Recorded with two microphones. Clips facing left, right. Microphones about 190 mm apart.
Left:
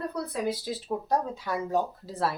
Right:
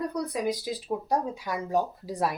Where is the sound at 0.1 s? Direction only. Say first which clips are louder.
Right 1 dB; 15° right (ahead or behind).